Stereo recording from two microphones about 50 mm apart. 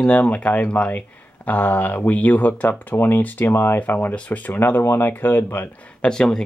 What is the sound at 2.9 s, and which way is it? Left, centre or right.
Speech, left.